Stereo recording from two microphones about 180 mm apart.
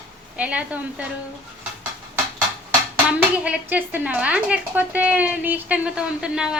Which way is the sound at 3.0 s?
5° right (ahead or behind).